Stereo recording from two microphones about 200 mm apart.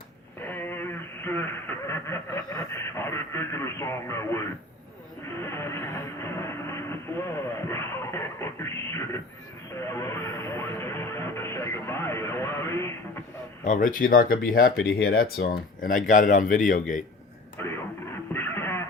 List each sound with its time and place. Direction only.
0.4 s a sound: 10° left (ahead or behind)
5.4 s train: 15° left (ahead or behind)
9.7 s music: 15° left (ahead or behind)
13.7 s speech: 45° left (ahead or behind)
17.6 s radio: 10° left (ahead or behind)
18.3 s music: 10° left (ahead or behind)